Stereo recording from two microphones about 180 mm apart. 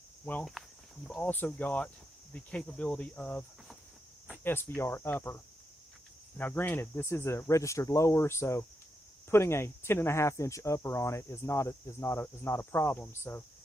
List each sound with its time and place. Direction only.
0.3 s speech: 5° left (ahead or behind)